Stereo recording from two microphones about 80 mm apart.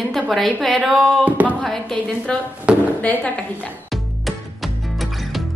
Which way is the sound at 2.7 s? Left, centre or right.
Centre.